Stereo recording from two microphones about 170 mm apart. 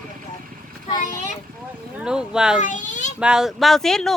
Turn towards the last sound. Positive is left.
turn(degrees=0)  # may be behind; listen again after turning